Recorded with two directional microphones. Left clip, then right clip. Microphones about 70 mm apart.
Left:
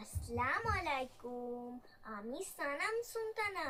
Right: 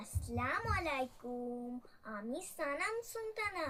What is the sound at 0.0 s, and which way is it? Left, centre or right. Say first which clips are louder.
A child's voice: left 2 dB; left.